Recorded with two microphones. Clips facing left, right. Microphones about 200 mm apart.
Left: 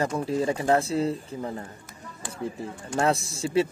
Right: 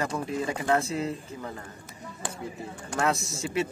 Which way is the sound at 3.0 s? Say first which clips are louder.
Left 3 dB; 30° left (ahead or behind).